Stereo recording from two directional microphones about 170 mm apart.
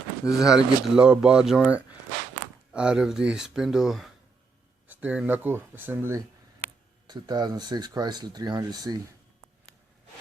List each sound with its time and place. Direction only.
0.3 s speech: 5° right (ahead or behind); by 9.0 s 25° right (ahead or behind)